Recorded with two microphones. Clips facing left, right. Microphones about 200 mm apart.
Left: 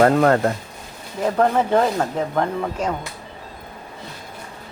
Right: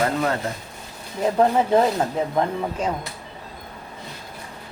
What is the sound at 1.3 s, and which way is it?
Speech, 15° right (ahead or behind).